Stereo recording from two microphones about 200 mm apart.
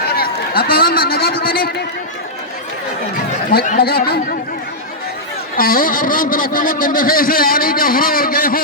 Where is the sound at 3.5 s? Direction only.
40° left (ahead or behind).